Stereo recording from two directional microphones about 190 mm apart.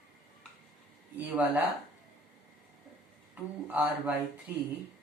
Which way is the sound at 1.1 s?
10° right (ahead or behind).